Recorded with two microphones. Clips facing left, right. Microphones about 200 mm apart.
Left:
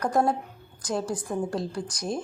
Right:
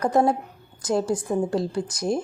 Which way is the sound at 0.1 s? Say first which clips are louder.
Right 4 dB; 25° right (ahead or behind).